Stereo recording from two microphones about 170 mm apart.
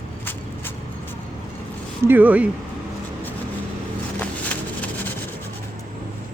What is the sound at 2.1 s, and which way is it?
Speech, 10° right (ahead or behind).